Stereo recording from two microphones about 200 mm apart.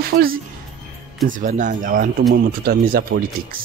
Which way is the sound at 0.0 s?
45° right (ahead or behind).